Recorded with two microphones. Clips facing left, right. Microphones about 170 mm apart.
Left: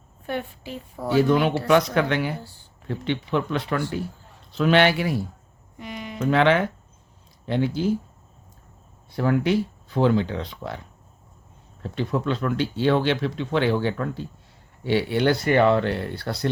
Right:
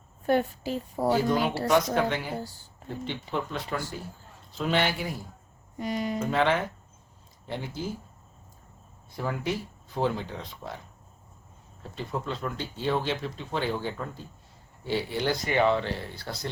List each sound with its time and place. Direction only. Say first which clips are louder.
0.3 s a woman's voice: right 5 dB; 40° right (ahead or behind)
1.1 s speech: left 7 dB; 70° left (ahead or behind)
5.7 s speech: right 5 dB; 40° right (ahead or behind)
6.1 s speech: left 8 dB; 70° left (ahead or behind)
9.1 s speech: left 9 dB; 75° left (ahead or behind)
11.8 s speech: left 8 dB; 75° left (ahead or behind)